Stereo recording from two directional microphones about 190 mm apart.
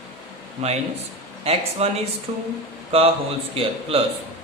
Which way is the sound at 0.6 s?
35° right (ahead or behind).